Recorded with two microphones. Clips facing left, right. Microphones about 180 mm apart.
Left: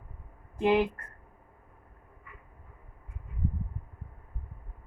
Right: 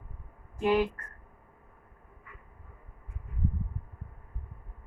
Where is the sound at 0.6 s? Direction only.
25° left (ahead or behind).